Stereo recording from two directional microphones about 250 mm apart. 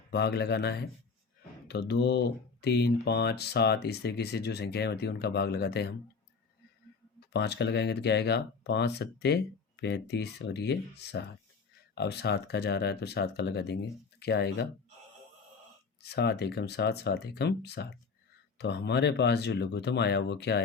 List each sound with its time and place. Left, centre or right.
0.1 s speech: left
7.3 s speech: left
16.0 s speech: left